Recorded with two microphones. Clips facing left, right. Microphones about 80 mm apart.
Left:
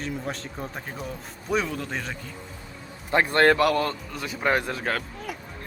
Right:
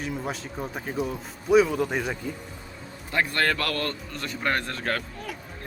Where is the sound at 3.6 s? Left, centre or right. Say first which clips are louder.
Left 7 dB; centre.